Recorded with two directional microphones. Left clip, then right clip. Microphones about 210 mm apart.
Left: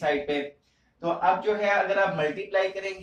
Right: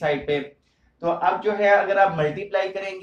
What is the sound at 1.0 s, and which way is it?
A man's voice, 45° right (ahead or behind).